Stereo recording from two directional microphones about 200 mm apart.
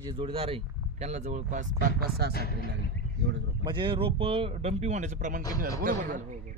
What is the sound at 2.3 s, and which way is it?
Speech, 50° left (ahead or behind).